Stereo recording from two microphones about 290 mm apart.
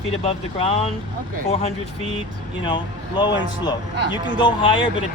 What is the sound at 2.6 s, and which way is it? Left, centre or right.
Speech, centre.